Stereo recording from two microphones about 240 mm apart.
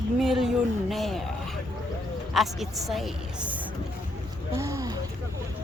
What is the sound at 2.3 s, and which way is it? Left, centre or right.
A woman's voice, centre.